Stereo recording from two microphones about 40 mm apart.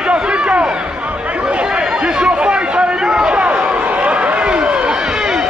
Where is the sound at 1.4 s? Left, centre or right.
Right.